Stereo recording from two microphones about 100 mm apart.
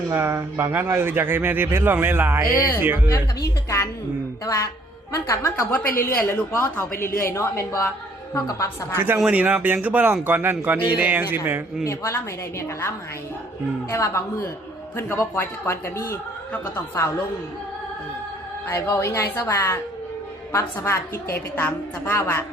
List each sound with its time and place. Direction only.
0.1 s speech: 25° right (ahead or behind)
3.1 s a woman's voice: 30° left (ahead or behind)
9.2 s speech: 15° right (ahead or behind)
11.9 s a woman's voice: 30° left (ahead or behind)
13.9 s a woman's voice: 25° left (ahead or behind)
18.8 s a woman's voice: 30° left (ahead or behind)